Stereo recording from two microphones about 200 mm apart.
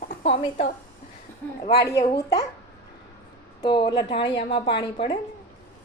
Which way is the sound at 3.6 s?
25° left (ahead or behind).